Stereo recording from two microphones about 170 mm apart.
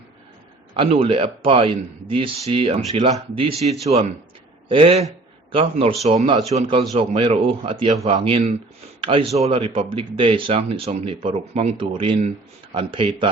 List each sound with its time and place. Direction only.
0.8 s speech: 30° right (ahead or behind)
6.2 s speech: 20° right (ahead or behind)
6.6 s speech: 35° right (ahead or behind)